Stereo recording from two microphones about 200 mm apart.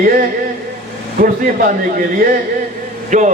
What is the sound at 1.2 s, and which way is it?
Speech, 40° right (ahead or behind).